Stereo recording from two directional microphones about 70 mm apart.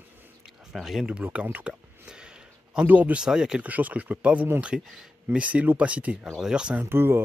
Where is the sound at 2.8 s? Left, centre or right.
Right.